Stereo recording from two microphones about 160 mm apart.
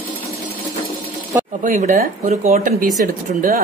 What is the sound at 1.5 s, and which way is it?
Speech, 50° right (ahead or behind).